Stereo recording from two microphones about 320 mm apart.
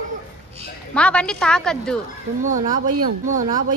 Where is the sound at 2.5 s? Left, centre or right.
Right.